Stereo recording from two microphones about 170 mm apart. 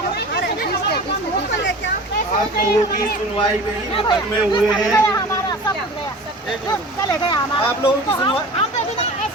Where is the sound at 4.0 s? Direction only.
25° left (ahead or behind).